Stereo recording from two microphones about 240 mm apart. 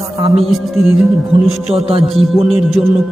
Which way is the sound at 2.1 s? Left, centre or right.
Centre.